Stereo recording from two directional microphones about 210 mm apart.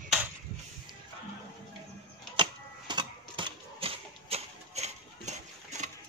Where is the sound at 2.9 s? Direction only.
20° right (ahead or behind).